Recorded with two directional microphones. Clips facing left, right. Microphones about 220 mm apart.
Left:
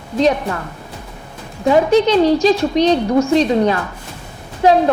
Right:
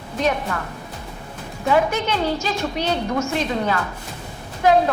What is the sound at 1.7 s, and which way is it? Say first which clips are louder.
A woman's voice: left 8 dB; 35° left (ahead or behind).